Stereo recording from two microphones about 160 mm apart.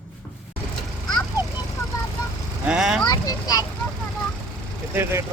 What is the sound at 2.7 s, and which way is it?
Speech, 5° right (ahead or behind).